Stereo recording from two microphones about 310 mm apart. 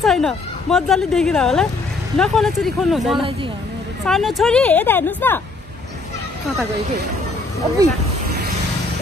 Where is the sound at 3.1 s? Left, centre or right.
Centre.